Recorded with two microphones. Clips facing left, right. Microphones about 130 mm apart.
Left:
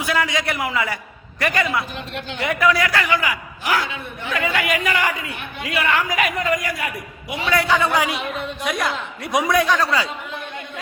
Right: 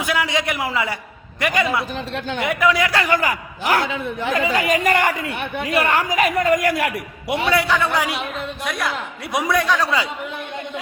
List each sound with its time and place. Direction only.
0.0 s a sound: 15° right (ahead or behind)
0.3 s speech: 20° right (ahead or behind)
2.0 s a woman's voice: 35° right (ahead or behind)
2.4 s speech: 20° right (ahead or behind)
3.1 s speech: 45° right (ahead or behind)
5.3 s speech: 60° right (ahead or behind); by 6.6 s 40° right (ahead or behind)
6.7 s a man's voice: 70° right (ahead or behind)
7.7 s a man's voice: centre (ahead or behind)
9.8 s speech: 20° right (ahead or behind)